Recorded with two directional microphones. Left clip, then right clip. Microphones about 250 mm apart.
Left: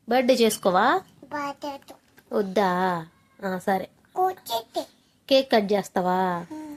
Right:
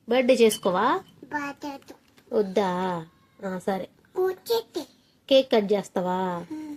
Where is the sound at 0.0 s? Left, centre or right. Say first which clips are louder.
Right 1 dB; left.